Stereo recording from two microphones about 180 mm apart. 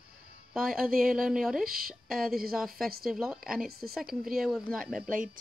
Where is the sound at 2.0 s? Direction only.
Centre (ahead or behind).